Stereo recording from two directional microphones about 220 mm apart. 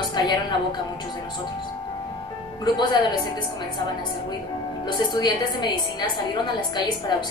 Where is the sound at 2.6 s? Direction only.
20° left (ahead or behind).